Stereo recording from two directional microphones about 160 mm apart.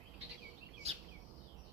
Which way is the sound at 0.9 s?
40° right (ahead or behind).